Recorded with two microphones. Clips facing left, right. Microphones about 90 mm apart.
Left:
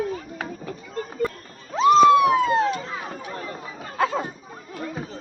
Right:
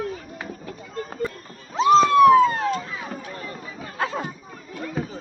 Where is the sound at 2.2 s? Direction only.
5° left (ahead or behind).